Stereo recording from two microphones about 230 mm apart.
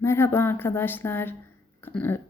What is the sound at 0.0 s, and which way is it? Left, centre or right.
A woman's voice, centre.